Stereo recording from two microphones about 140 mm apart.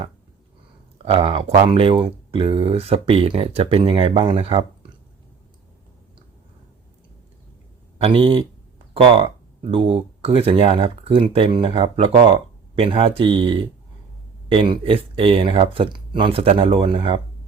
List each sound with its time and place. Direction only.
1.0 s speech: 40° right (ahead or behind)
7.9 s speech: 40° right (ahead or behind)